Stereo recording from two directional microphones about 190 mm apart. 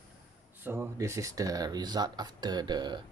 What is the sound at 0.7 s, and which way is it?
Speech, 15° right (ahead or behind).